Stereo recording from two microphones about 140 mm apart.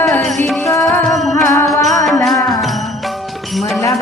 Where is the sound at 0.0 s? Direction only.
5° left (ahead or behind).